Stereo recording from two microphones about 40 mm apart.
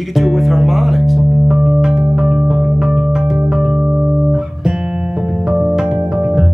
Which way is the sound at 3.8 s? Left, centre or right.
Right.